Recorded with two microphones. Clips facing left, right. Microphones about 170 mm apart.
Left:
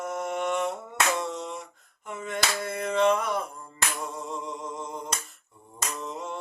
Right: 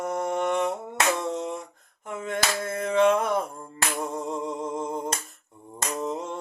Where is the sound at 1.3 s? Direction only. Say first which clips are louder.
Right 5 dB; 50° right (ahead or behind).